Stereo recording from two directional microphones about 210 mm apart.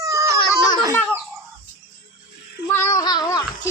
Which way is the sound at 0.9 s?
10° left (ahead or behind).